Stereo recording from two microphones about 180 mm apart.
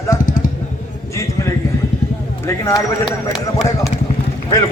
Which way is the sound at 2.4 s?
15° left (ahead or behind).